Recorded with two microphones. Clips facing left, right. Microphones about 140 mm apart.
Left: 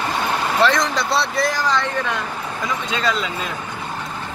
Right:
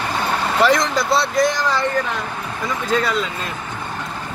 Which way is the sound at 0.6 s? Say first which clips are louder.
Right 3 dB; centre (ahead or behind).